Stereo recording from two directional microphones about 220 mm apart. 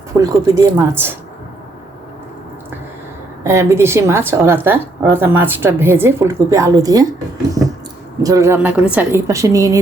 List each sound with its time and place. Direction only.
0.2 s speech: 15° right (ahead or behind)
3.4 s speech: 15° right (ahead or behind)
8.2 s speech: 15° right (ahead or behind)